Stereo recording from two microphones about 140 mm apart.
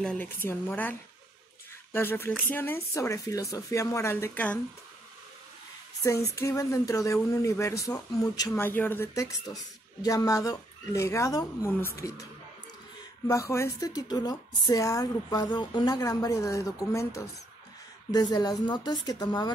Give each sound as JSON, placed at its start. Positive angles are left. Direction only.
{"t": 0.0, "sound": "a woman's voice", "side_deg": 10}
{"t": 6.0, "sound": "a woman's voice", "side_deg": 20}
{"t": 13.3, "sound": "a woman's voice", "side_deg": 20}